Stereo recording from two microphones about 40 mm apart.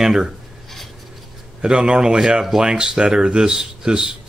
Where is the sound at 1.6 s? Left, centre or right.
Right.